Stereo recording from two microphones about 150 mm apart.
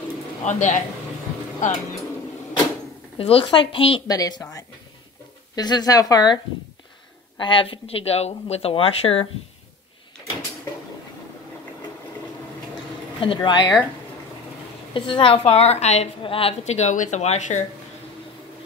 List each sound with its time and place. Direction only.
0.5 s a woman's voice: 50° left (ahead or behind)
3.2 s speech: 40° left (ahead or behind)
4.1 s speech: 25° left (ahead or behind)
5.6 s speech: 25° left (ahead or behind)
13.2 s speech: 35° left (ahead or behind)
15.0 s a woman's voice: 35° left (ahead or behind); by 17.6 s 55° left (ahead or behind)